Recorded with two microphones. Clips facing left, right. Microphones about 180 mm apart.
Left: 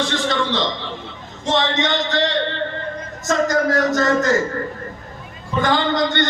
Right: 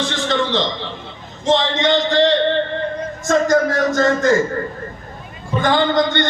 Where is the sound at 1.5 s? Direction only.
50° left (ahead or behind).